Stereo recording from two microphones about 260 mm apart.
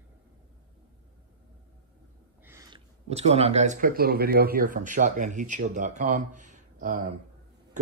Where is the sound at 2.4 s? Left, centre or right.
Centre.